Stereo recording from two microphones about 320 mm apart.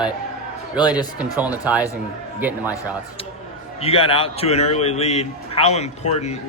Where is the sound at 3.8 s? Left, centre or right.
Centre.